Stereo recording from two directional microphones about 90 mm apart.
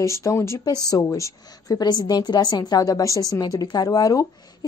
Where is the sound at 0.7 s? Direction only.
45° left (ahead or behind).